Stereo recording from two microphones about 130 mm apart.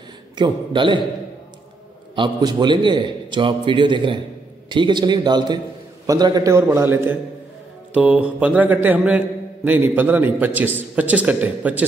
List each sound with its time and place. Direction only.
0.4 s a man's voice: 35° right (ahead or behind)
2.1 s a man's voice: 35° right (ahead or behind); by 7.2 s 15° right (ahead or behind)
7.9 s mantra: 10° right (ahead or behind)